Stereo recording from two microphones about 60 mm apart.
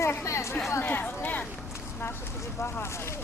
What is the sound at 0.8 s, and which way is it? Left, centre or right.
Speech, left.